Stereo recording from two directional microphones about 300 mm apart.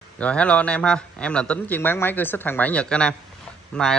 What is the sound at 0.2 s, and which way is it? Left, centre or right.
Speech, centre.